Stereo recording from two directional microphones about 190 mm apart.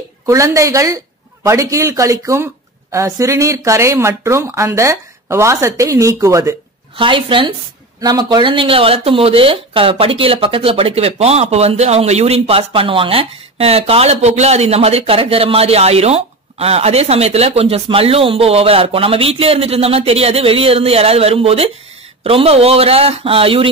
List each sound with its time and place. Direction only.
0.3 s speech: 15° right (ahead or behind)
7.0 s speech: 25° right (ahead or behind)